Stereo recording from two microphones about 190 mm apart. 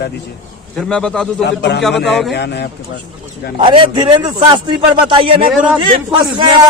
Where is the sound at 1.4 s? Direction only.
65° left (ahead or behind).